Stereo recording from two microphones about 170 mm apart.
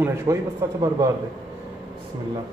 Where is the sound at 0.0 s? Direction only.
20° right (ahead or behind).